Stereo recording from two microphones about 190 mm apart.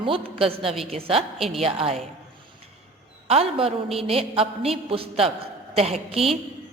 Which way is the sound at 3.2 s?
30° right (ahead or behind).